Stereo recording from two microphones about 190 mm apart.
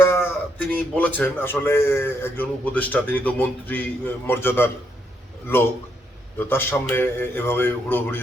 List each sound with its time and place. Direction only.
0.0 s speech: 10° left (ahead or behind)
6.4 s speech: 10° left (ahead or behind)